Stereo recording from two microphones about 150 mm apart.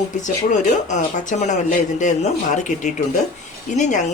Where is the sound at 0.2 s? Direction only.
55° left (ahead or behind).